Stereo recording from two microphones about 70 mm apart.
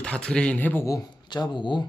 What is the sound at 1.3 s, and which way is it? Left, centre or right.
Speech, left.